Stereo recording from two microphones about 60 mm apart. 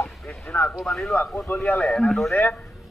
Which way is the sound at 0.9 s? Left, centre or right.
Centre.